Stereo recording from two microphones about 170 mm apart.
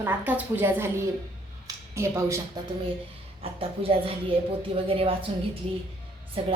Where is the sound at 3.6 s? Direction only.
35° right (ahead or behind).